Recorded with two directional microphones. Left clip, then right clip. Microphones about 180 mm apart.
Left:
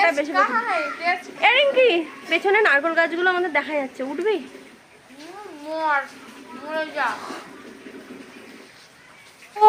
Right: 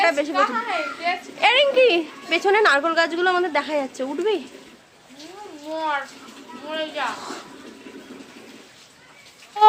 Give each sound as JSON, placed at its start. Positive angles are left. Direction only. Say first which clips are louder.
{"t": 0.0, "sound": "a sound", "louder": "even", "side_deg": -15}
{"t": 0.3, "sound": "a woman's voice", "louder": "left 1 dB", "side_deg": 5}
{"t": 1.4, "sound": "a woman's voice", "louder": "right 1 dB", "side_deg": -15}
{"t": 5.7, "sound": "a woman's voice", "louder": "left 3 dB", "side_deg": -5}